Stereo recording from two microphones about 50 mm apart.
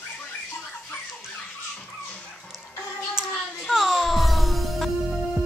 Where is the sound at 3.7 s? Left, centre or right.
Centre.